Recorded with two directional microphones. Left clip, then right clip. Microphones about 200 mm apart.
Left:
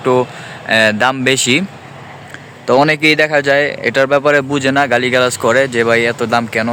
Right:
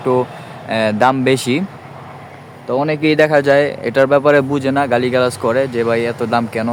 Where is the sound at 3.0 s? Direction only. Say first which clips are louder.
Left 1 dB; 5° right (ahead or behind).